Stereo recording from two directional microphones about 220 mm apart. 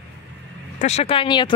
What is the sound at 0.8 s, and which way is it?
Speech, 30° left (ahead or behind).